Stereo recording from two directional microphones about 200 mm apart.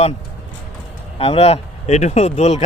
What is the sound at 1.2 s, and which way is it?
Speech, 30° left (ahead or behind).